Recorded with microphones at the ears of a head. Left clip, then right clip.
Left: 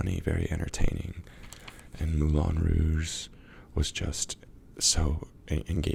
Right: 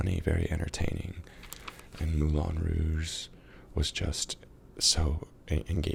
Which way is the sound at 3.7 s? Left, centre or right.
Centre.